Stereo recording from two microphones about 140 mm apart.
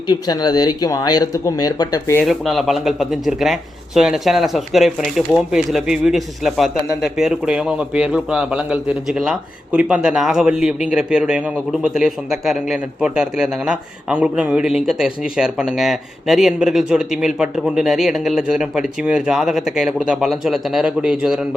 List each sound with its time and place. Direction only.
0.1 s speech: 30° left (ahead or behind)
2.2 s a man's voice: centre (ahead or behind)